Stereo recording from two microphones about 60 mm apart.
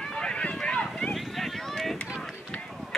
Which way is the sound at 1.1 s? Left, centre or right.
Centre.